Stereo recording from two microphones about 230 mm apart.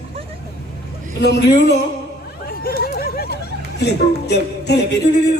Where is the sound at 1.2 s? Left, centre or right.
Left.